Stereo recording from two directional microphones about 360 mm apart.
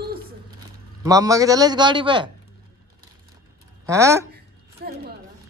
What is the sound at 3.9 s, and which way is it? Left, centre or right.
Speech, centre.